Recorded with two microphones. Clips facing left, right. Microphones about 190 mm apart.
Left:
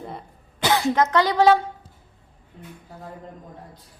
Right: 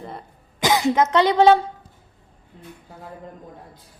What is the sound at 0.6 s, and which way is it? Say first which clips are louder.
Speech: right 2 dB; 15° right (ahead or behind).